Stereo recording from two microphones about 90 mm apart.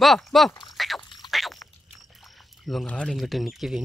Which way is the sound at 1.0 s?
60° left (ahead or behind).